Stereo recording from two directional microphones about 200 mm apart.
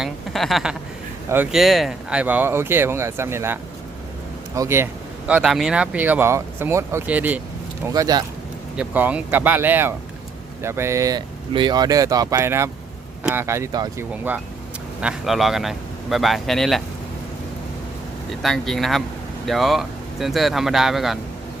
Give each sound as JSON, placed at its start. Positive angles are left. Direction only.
{"t": 0.0, "sound": "a man's voice", "side_deg": 0}
{"t": 5.3, "sound": "speech", "side_deg": 0}
{"t": 7.9, "sound": "speech", "side_deg": -20}
{"t": 8.7, "sound": "speech", "side_deg": -5}
{"t": 15.0, "sound": "a man's voice", "side_deg": 0}
{"t": 18.4, "sound": "a man's voice", "side_deg": 0}